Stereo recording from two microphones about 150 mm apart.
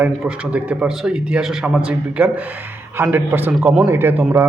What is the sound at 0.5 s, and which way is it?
Speech, 10° right (ahead or behind).